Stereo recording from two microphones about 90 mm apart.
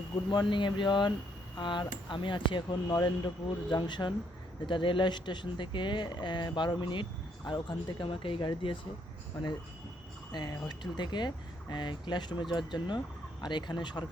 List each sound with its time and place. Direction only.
0.3 s speech: 60° left (ahead or behind)
10.3 s speech: 50° left (ahead or behind)